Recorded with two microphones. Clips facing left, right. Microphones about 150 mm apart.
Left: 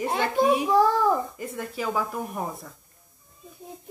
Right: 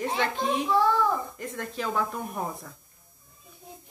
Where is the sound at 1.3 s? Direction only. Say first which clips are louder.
Left 1 dB; 10° left (ahead or behind).